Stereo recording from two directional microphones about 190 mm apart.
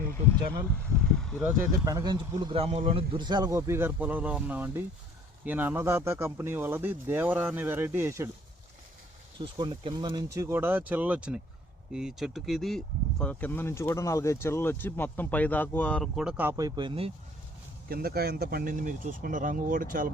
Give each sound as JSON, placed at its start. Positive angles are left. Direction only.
{"t": 0.9, "sound": "vehicle", "side_deg": 5}
{"t": 1.5, "sound": "speech", "side_deg": -20}
{"t": 9.4, "sound": "speech", "side_deg": -25}
{"t": 17.8, "sound": "speech", "side_deg": -55}